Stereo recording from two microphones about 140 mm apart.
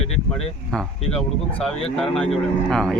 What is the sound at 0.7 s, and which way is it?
Speech, 5° left (ahead or behind).